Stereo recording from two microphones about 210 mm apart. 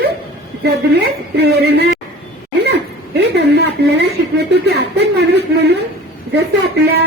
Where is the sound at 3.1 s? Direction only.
55° right (ahead or behind).